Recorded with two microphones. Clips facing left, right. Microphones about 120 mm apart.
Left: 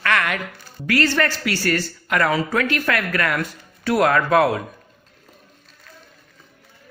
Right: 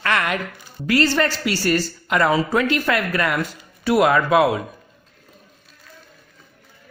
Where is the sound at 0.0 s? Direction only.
25° right (ahead or behind); by 4.6 s 10° right (ahead or behind).